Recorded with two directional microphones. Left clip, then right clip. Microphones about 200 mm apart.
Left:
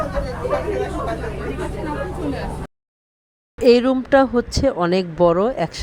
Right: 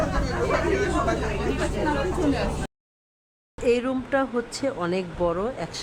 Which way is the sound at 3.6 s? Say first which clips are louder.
Left 9 dB; 35° left (ahead or behind).